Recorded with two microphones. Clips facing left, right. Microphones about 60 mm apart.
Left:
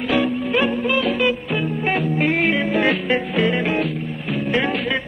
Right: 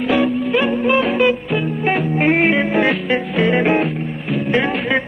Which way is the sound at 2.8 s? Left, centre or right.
Centre.